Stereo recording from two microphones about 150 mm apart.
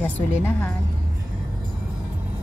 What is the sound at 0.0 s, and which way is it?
Speech, 10° left (ahead or behind).